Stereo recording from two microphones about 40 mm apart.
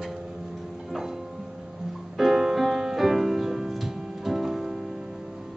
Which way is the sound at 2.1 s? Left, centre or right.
Centre.